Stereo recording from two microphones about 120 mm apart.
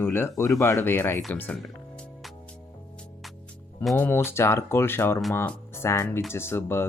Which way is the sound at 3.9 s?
15° left (ahead or behind).